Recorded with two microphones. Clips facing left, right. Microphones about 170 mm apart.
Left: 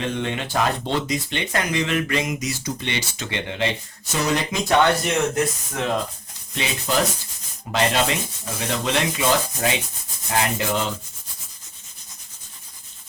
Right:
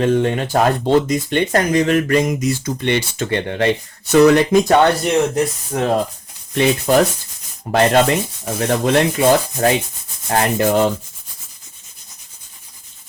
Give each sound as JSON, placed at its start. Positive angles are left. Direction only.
{"t": 0.0, "sound": "speech", "side_deg": -45}
{"t": 4.1, "sound": "speech", "side_deg": -65}
{"t": 5.7, "sound": "speech", "side_deg": -35}
{"t": 6.6, "sound": "speech", "side_deg": -50}